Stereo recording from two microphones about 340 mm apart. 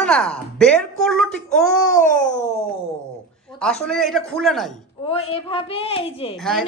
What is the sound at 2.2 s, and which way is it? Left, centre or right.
Speech, left.